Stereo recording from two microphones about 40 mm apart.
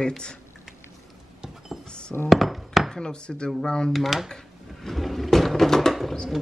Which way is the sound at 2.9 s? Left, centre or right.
Centre.